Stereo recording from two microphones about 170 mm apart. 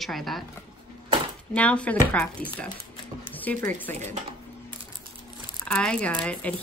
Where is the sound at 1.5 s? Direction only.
5° left (ahead or behind).